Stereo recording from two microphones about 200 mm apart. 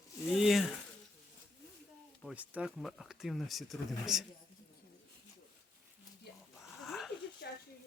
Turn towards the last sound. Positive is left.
turn(degrees=55)  # may be behind; listen again after turning